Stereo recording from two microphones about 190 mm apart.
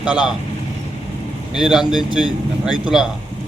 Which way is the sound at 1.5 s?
5° right (ahead or behind).